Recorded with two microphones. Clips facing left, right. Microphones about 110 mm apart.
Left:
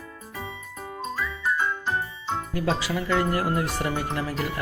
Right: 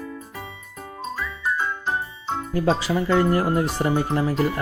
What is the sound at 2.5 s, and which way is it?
Speech, 30° right (ahead or behind).